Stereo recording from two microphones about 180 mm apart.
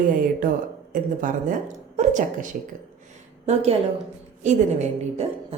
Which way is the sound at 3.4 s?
35° right (ahead or behind).